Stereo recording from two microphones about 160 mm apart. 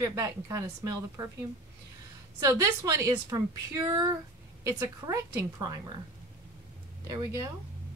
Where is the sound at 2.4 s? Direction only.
20° right (ahead or behind).